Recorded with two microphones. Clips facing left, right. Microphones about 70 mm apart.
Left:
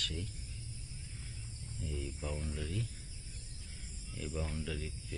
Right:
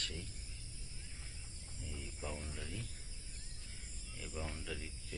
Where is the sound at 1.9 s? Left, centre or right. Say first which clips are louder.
Left 4 dB; centre.